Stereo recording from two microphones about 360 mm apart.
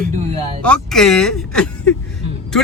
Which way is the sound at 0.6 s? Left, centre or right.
Centre.